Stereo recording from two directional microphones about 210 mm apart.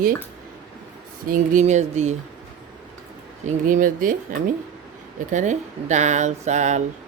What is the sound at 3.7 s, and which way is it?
Speech, 40° right (ahead or behind).